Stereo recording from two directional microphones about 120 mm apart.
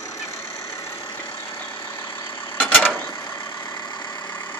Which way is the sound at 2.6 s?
15° left (ahead or behind).